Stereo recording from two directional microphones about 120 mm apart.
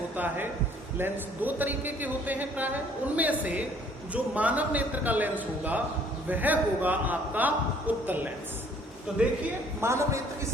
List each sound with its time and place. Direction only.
0.9 s a man's voice: 15° right (ahead or behind)
9.8 s a man's voice: 25° right (ahead or behind)